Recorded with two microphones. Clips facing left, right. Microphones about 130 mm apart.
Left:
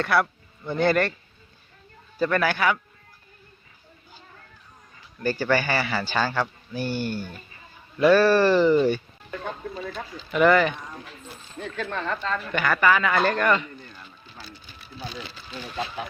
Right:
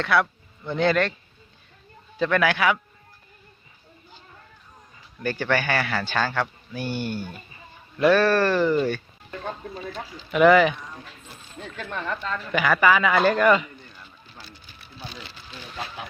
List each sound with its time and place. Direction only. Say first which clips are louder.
0.0 s speech: even; 5° left (ahead or behind)
2.1 s speech: right 1 dB; 5° left (ahead or behind)
5.2 s speech: left 1 dB; 5° left (ahead or behind)
10.3 s speech: right 3 dB; 5° right (ahead or behind)
11.8 s speech: left 2 dB; 15° right (ahead or behind)
12.4 s speech: right 4 dB; 5° right (ahead or behind)